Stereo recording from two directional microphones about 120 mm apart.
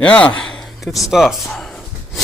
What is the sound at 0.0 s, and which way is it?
Speech, 10° left (ahead or behind).